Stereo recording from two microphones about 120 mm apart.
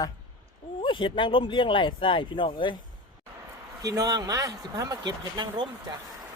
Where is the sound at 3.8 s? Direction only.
30° right (ahead or behind).